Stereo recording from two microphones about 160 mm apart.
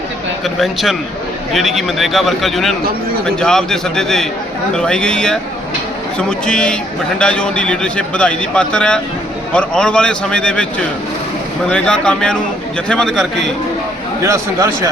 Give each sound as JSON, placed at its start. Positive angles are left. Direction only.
{"t": 0.4, "sound": "a man's voice", "side_deg": 0}
{"t": 14.2, "sound": "speech", "side_deg": -20}